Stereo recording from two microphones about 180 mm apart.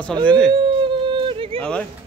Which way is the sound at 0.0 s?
5° left (ahead or behind).